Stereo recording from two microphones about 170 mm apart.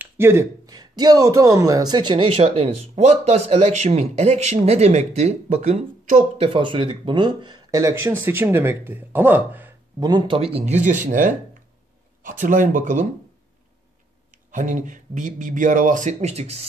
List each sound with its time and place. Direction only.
0.0 s speech: 15° right (ahead or behind); by 6.4 s 45° right (ahead or behind)
6.4 s speech: 30° right (ahead or behind); by 9.8 s 10° right (ahead or behind)
9.9 s speech: 25° right (ahead or behind); by 13.1 s 50° right (ahead or behind)
14.3 s speech: 50° right (ahead or behind)